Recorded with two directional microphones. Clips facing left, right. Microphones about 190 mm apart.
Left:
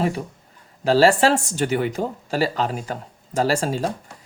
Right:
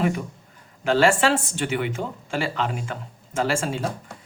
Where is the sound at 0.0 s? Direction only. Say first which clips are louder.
Left 1 dB; 35° left (ahead or behind).